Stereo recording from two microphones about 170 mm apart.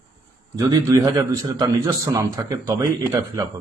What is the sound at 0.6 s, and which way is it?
Speech, 20° right (ahead or behind).